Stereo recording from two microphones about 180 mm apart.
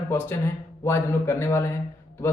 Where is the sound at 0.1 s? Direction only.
10° left (ahead or behind).